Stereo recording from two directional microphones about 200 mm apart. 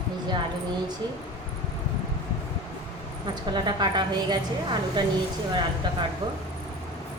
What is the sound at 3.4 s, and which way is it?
A woman's voice, 20° right (ahead or behind).